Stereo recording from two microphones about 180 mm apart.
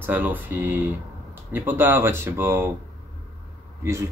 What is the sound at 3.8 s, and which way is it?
Speech, 15° right (ahead or behind).